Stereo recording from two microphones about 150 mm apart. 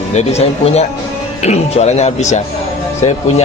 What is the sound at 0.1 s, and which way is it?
Speech, 45° left (ahead or behind).